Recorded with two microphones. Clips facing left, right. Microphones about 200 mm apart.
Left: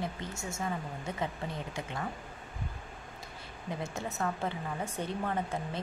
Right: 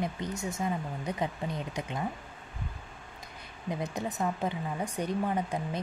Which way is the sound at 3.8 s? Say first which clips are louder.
Right 3 dB; 15° right (ahead or behind).